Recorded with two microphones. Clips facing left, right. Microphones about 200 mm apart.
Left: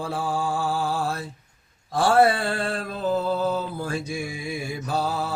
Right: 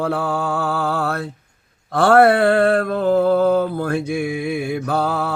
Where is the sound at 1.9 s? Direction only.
60° right (ahead or behind).